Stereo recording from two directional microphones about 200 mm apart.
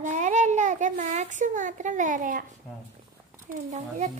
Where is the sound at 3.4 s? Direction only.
40° right (ahead or behind).